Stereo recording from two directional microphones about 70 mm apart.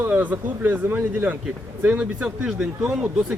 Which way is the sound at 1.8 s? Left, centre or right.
Centre.